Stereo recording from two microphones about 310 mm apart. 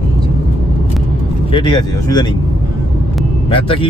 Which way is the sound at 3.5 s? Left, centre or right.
Centre.